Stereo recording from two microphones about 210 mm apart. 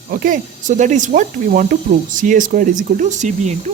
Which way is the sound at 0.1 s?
40° right (ahead or behind).